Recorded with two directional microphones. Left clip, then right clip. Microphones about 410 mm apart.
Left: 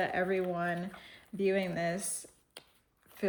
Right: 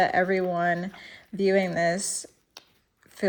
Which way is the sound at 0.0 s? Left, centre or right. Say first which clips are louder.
Right 9 dB; centre.